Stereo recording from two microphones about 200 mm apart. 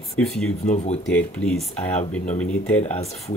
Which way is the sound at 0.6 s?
35° left (ahead or behind).